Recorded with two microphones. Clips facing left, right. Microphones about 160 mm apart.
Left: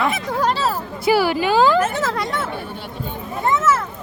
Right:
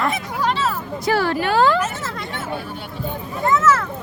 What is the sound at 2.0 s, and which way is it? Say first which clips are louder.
Hubbub: left 7 dB; 90° left.